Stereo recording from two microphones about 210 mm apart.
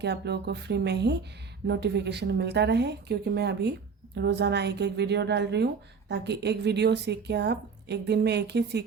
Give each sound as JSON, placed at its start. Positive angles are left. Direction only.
{"t": 0.0, "sound": "a woman's voice", "side_deg": -55}